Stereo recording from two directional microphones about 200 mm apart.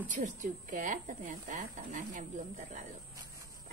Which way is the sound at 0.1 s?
40° right (ahead or behind).